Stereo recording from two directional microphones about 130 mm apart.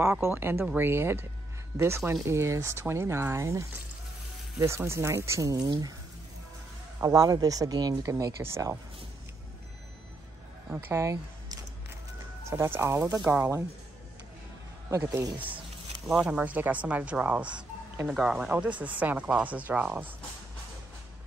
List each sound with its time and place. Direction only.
0.0 s speech: 15° right (ahead or behind)
7.0 s speech: 25° right (ahead or behind)
10.7 s speech: 20° right (ahead or behind)
15.3 s speech: 10° right (ahead or behind)